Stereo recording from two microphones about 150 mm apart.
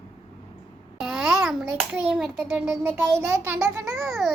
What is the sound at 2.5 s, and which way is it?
A child's voice, 10° right (ahead or behind).